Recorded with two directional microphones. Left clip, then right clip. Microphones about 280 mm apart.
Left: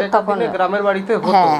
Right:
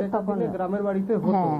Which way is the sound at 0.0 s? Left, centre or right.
Centre.